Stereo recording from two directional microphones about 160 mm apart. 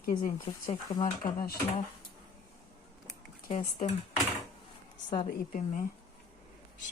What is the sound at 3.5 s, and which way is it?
Speech, 45° left (ahead or behind).